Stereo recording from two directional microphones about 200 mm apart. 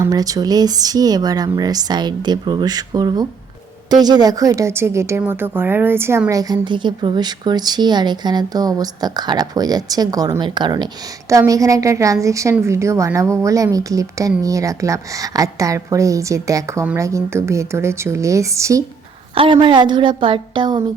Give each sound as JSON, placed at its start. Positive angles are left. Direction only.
{"t": 0.0, "sound": "a woman's voice", "side_deg": -20}
{"t": 19.3, "sound": "a woman's voice", "side_deg": -25}